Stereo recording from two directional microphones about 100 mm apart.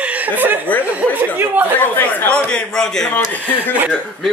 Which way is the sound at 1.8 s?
20° left (ahead or behind).